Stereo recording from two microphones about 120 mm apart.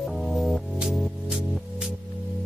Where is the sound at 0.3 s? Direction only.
Centre (ahead or behind).